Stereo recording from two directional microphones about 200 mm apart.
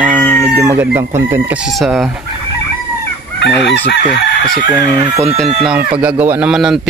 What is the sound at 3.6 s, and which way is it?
Chicken, 55° left (ahead or behind).